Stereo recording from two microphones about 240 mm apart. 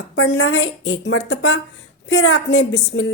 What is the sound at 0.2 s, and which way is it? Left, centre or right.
A woman's voice, left.